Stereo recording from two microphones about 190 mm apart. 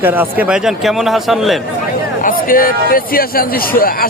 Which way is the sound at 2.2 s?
50° left (ahead or behind).